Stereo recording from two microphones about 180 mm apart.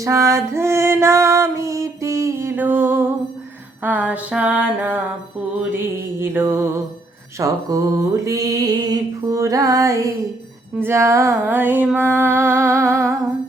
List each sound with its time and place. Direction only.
0.0 s female singing: 15° right (ahead or behind)
5.7 s female singing: 10° right (ahead or behind)